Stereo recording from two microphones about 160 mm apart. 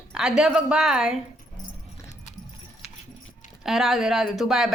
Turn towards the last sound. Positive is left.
turn(degrees=0)  # may be behind; listen again after turning